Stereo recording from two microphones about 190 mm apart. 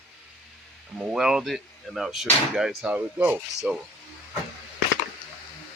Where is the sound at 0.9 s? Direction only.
5° right (ahead or behind).